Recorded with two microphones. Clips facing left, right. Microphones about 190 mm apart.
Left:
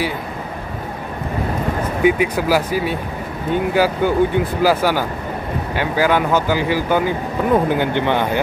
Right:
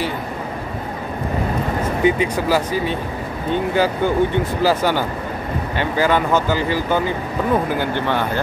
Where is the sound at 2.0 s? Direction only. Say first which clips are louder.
Left 2 dB; 10° left (ahead or behind).